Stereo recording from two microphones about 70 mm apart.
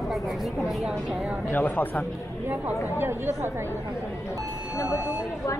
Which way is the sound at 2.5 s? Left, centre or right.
Right.